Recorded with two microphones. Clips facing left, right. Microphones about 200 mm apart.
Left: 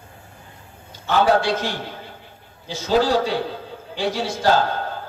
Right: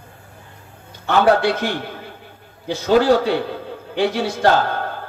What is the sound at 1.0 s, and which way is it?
A man's voice, 60° right (ahead or behind).